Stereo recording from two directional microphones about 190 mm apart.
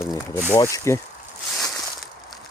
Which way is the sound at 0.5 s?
15° left (ahead or behind).